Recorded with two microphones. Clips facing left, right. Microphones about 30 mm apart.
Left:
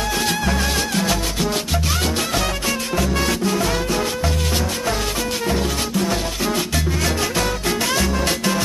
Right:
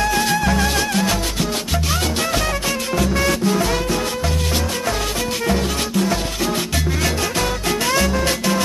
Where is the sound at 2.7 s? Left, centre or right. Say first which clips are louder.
Right 1 dB; right.